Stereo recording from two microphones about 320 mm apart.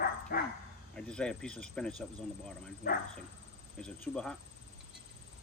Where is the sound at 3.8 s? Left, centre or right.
Centre.